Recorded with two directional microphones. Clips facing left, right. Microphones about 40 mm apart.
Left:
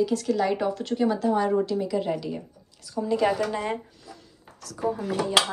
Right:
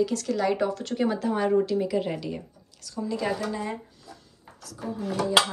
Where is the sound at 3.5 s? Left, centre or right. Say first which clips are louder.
Left 3 dB; left.